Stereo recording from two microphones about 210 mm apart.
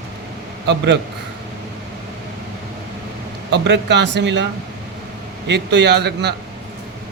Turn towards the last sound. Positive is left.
turn(degrees=-55)  # may be behind; listen again after turning